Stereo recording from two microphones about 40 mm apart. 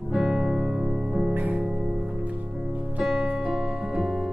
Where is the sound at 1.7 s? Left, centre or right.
Centre.